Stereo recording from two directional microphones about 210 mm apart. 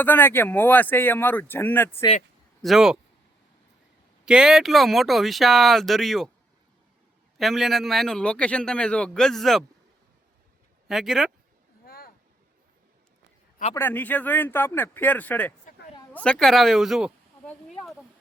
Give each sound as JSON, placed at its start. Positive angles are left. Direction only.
{"t": 0.0, "sound": "speech", "side_deg": 10}
{"t": 2.6, "sound": "a man's voice", "side_deg": 0}
{"t": 4.3, "sound": "a man's voice", "side_deg": -5}
{"t": 7.3, "sound": "a man's voice", "side_deg": 0}
{"t": 10.8, "sound": "speech", "side_deg": 0}
{"t": 11.9, "sound": "a sound", "side_deg": 45}
{"t": 13.7, "sound": "speech", "side_deg": 10}